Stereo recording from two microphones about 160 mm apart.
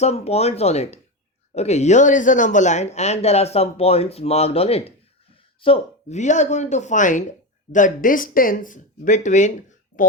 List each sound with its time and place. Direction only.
0.0 s speech: 40° left (ahead or behind)